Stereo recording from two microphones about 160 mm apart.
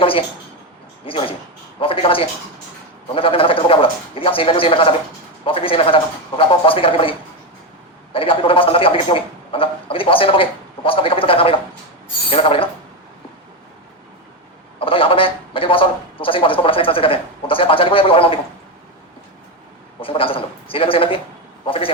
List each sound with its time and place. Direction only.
0.0 s a man's voice: 35° left (ahead or behind)
14.8 s a man's voice: 35° left (ahead or behind)
20.0 s a man's voice: 35° left (ahead or behind)